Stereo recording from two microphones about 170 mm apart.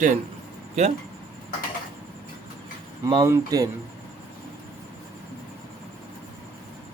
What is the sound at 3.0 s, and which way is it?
Speech, 30° right (ahead or behind).